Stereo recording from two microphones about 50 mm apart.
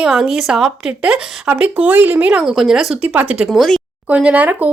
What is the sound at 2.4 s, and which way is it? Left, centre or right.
Speech, centre.